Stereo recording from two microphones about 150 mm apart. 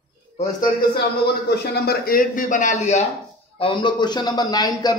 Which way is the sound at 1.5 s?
80° left.